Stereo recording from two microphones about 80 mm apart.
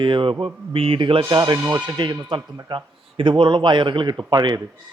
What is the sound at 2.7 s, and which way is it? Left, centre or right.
Speech, right.